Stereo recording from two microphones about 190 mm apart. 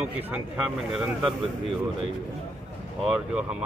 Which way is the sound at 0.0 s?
5° right (ahead or behind).